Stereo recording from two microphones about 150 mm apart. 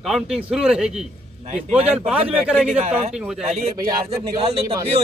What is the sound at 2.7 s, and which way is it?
A man's voice, 45° right (ahead or behind).